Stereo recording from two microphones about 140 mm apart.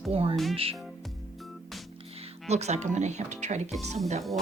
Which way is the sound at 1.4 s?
Centre (ahead or behind).